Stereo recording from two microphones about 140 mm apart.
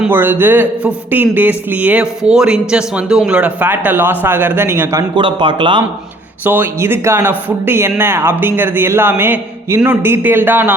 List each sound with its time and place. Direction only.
0.1 s a man's voice: 15° right (ahead or behind)
5.1 s speech: 35° right (ahead or behind)
6.4 s a man's voice: 15° right (ahead or behind)